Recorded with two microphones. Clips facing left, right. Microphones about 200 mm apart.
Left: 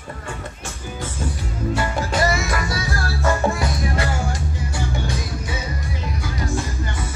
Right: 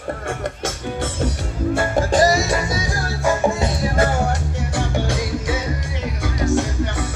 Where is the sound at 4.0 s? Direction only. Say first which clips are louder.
Right 5 dB; 55° right (ahead or behind); by 5.6 s 90° right.